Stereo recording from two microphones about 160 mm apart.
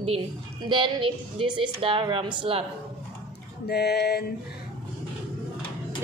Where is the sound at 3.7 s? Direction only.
90° left.